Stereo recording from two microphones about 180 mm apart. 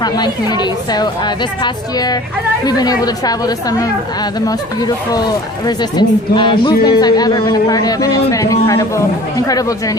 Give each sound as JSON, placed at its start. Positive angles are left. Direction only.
{"t": 0.0, "sound": "speech", "side_deg": 25}